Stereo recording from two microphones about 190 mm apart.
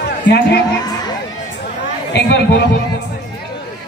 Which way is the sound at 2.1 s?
65° left (ahead or behind).